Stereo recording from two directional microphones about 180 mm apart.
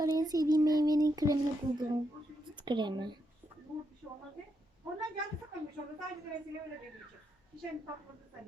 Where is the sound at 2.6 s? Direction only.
25° right (ahead or behind).